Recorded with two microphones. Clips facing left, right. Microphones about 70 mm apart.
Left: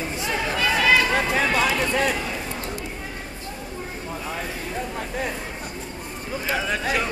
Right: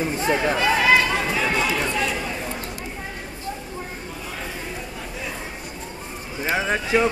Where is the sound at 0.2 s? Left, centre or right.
Right.